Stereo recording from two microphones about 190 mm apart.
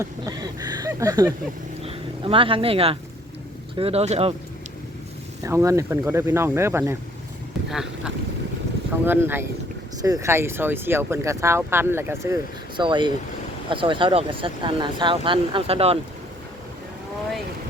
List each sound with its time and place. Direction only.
0.0 s speech: 20° right (ahead or behind)
1.8 s speech: 30° right (ahead or behind)
5.4 s speech: 15° right (ahead or behind)
7.7 s a sound: centre (ahead or behind)
9.0 s speech: 10° right (ahead or behind); by 16.0 s 30° right (ahead or behind)